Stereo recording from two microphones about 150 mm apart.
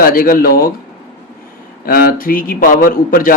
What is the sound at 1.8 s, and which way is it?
Speech, 75° left (ahead or behind).